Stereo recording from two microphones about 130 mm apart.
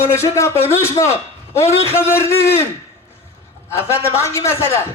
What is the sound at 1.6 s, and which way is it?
Speech, 20° left (ahead or behind).